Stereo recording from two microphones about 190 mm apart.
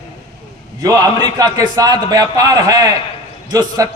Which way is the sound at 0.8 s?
20° right (ahead or behind).